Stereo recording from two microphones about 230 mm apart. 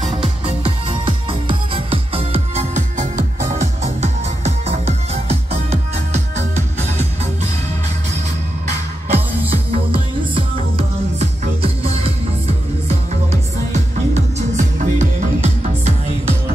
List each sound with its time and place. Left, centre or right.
0.0 s music: right
9.1 s music: right
14.1 s music: right